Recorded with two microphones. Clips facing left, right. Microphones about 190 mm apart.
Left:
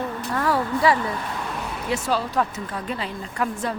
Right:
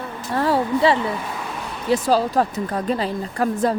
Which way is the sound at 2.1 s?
35° right (ahead or behind).